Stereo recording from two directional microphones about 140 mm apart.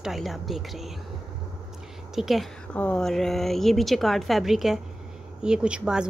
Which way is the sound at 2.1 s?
Centre (ahead or behind).